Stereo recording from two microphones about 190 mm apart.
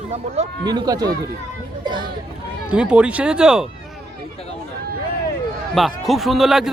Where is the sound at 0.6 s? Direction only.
20° right (ahead or behind).